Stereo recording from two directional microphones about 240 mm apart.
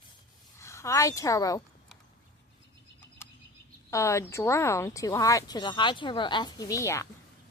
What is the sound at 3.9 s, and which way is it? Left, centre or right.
Speech, centre.